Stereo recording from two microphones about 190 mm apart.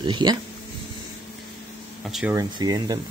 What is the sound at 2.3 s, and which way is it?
Speech, 20° right (ahead or behind).